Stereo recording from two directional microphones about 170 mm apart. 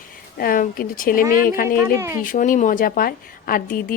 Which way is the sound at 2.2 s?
50° left (ahead or behind).